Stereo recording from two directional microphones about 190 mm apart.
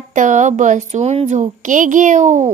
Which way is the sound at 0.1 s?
40° right (ahead or behind).